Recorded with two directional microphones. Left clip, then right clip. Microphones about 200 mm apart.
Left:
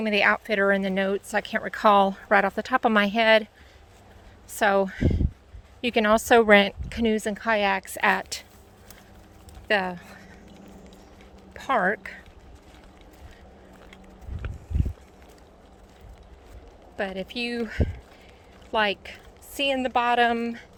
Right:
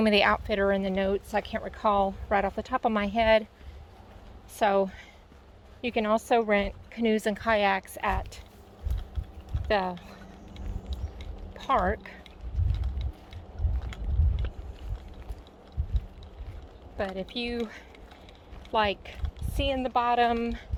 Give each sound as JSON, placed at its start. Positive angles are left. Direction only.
{"t": 0.2, "sound": "speech", "side_deg": 15}
{"t": 4.5, "sound": "speech", "side_deg": 25}
{"t": 7.0, "sound": "speech", "side_deg": 15}
{"t": 8.0, "sound": "a woman's voice", "side_deg": 50}
{"t": 9.6, "sound": "speech", "side_deg": 20}
{"t": 11.5, "sound": "a woman's voice", "side_deg": 30}
{"t": 17.0, "sound": "speech", "side_deg": 25}
{"t": 18.7, "sound": "speech", "side_deg": 20}